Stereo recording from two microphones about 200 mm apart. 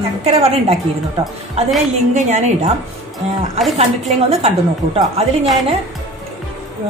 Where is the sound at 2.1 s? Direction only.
35° right (ahead or behind).